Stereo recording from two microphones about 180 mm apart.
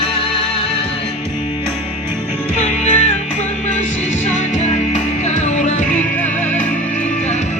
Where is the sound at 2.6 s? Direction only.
35° left (ahead or behind).